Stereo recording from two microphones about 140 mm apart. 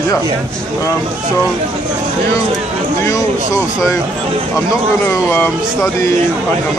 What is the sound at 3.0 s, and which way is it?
Speech, 20° left (ahead or behind).